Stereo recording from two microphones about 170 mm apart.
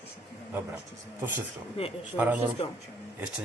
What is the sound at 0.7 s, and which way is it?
Speech, 10° right (ahead or behind).